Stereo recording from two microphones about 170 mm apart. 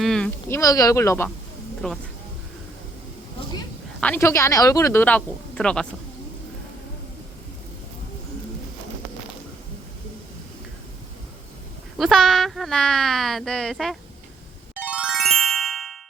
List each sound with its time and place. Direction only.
0.0 s a sound: centre (ahead or behind)
0.5 s speech: 20° left (ahead or behind)
1.8 s speech: 5° left (ahead or behind)
4.0 s speech: 15° left (ahead or behind)
11.9 s speech: centre (ahead or behind)
14.8 s music: 5° right (ahead or behind)